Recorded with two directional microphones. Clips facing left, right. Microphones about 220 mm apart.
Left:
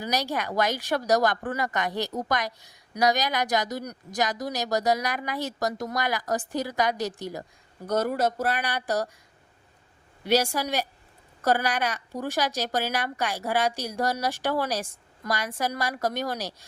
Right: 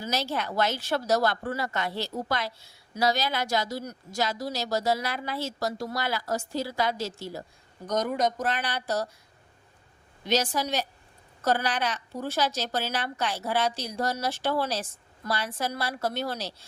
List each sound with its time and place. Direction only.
0.0 s a woman's voice: 15° left (ahead or behind)
10.2 s a woman's voice: 10° left (ahead or behind)